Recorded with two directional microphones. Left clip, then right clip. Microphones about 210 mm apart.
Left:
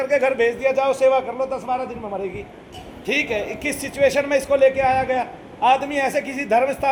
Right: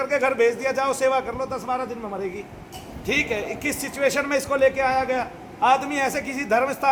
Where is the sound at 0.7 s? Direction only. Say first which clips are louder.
Left 4 dB; 15° right (ahead or behind).